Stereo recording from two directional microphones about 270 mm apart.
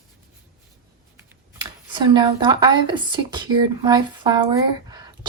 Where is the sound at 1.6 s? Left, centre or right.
Centre.